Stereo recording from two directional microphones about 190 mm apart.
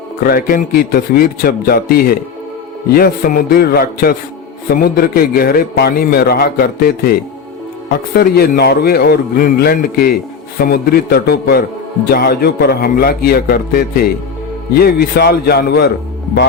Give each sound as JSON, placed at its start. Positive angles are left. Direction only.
{"t": 0.3, "sound": "a man's voice", "side_deg": 50}